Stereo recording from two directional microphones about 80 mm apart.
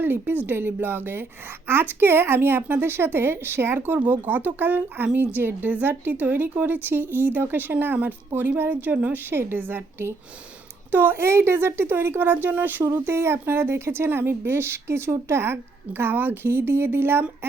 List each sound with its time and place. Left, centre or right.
0.0 s a woman's voice: right